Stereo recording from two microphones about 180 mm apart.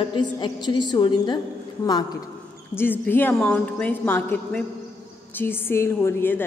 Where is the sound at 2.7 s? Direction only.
10° left (ahead or behind).